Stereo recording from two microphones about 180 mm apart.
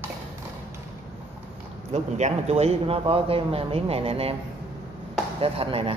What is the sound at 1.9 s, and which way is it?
Speech, 35° right (ahead or behind).